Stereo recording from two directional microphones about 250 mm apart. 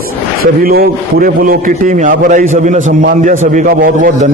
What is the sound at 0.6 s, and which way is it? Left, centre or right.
A man's voice, right.